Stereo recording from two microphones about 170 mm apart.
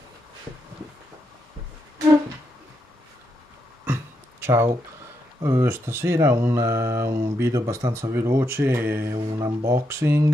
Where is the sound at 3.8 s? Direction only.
15° right (ahead or behind).